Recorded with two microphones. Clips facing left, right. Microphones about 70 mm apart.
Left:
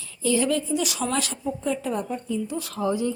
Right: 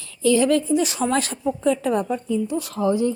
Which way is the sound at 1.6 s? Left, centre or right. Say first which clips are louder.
Right 7 dB; right.